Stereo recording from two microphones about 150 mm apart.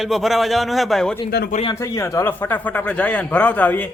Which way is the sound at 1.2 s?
90° left.